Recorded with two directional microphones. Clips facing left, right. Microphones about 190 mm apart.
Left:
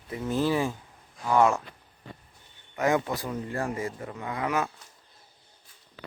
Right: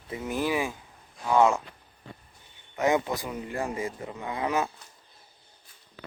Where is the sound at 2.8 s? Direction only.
20° right (ahead or behind).